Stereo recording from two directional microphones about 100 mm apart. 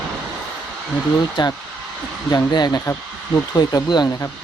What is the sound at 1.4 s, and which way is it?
Speech, 50° left (ahead or behind).